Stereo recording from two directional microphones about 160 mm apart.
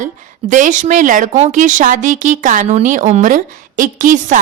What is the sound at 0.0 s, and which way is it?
Speech, 50° right (ahead or behind).